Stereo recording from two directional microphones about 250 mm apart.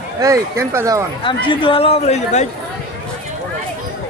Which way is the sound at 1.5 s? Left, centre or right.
Left.